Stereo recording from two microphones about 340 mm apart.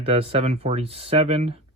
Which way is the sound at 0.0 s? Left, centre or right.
Centre.